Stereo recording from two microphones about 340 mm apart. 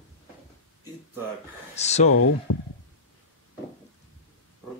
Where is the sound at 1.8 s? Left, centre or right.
Centre.